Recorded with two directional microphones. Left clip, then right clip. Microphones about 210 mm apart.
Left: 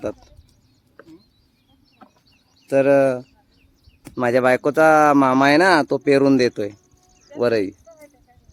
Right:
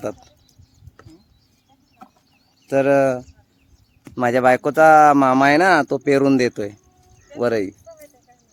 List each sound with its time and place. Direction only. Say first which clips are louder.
0.0 s speech: even; 10° right (ahead or behind)
2.0 s chicken: right 4 dB; 50° right (ahead or behind)
2.6 s speech: left 1 dB; 10° right (ahead or behind)
7.9 s insect: right 3 dB; 30° right (ahead or behind)